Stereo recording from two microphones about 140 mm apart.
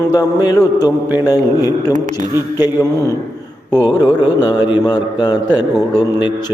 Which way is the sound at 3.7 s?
30° left (ahead or behind).